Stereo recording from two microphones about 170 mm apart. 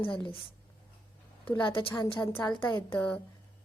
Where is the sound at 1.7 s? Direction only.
30° left (ahead or behind).